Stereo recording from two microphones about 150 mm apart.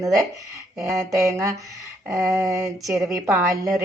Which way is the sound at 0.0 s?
20° right (ahead or behind).